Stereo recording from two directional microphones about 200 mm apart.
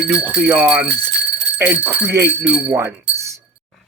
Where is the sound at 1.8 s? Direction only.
10° right (ahead or behind).